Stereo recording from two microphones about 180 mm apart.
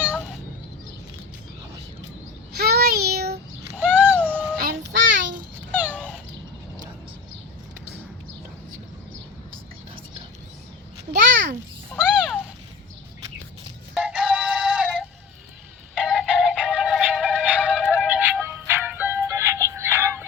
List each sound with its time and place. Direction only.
2.6 s child singing: 60° right (ahead or behind)
3.8 s a sound: 10° right (ahead or behind)
4.6 s child singing: 70° right (ahead or behind)
5.7 s cat: 10° right (ahead or behind)
11.9 s cat: centre (ahead or behind)
13.9 s synthetic singing: 5° right (ahead or behind)
16.0 s music: centre (ahead or behind)